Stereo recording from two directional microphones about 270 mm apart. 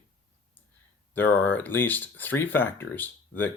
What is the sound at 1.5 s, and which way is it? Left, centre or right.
Speech, centre.